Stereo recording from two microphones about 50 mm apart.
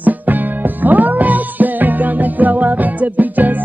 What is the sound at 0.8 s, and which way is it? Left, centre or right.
Music, right.